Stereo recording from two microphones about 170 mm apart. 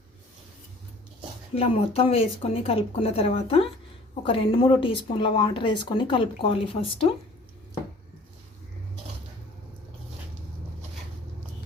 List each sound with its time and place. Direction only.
1.5 s speech: 35° left (ahead or behind)